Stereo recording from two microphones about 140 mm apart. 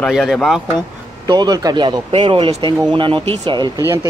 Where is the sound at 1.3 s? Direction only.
30° right (ahead or behind).